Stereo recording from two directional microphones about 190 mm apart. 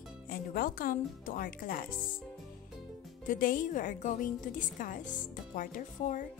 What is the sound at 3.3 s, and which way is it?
Speech, 45° left (ahead or behind).